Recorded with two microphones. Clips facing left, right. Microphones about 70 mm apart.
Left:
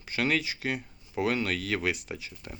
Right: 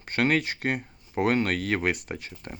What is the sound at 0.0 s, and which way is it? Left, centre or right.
Speech, right.